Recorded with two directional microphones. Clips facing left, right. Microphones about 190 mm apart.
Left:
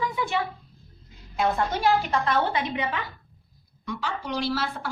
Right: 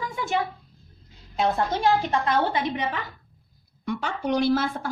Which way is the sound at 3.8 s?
55° right (ahead or behind).